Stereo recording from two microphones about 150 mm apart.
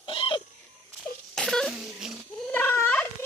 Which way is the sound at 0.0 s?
35° left (ahead or behind).